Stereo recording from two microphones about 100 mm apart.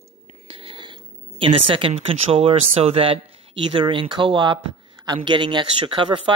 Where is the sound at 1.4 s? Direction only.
60° right (ahead or behind).